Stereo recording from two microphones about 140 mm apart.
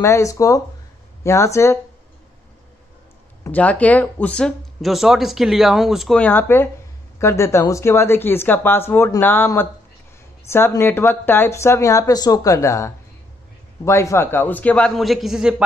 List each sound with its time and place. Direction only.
0.0 s speech: 20° left (ahead or behind)
3.4 s speech: 10° left (ahead or behind)